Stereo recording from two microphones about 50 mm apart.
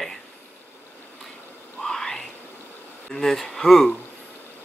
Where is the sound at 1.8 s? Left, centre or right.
Centre.